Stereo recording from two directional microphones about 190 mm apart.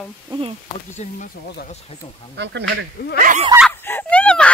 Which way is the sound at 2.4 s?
65° right (ahead or behind).